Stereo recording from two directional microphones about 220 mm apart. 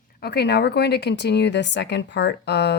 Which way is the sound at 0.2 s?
50° left (ahead or behind).